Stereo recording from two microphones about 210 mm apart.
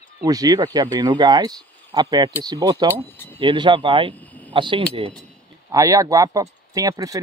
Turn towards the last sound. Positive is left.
turn(degrees=-15)  # may be behind; listen again after turning